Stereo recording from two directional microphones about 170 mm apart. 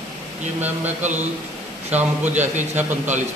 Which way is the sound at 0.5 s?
10° right (ahead or behind).